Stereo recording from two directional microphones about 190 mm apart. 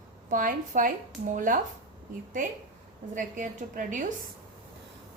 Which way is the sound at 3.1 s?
40° right (ahead or behind).